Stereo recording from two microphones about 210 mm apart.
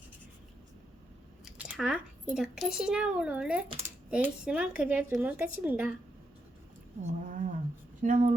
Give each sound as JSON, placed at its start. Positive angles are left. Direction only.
{"t": 1.5, "sound": "speech", "side_deg": -5}
{"t": 7.1, "sound": "speech", "side_deg": -35}